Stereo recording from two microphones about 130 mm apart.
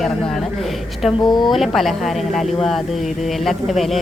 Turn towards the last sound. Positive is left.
turn(degrees=0)  # may be behind; listen again after turning